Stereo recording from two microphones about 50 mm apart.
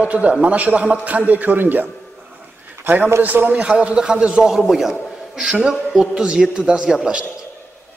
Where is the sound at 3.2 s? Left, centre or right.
Right.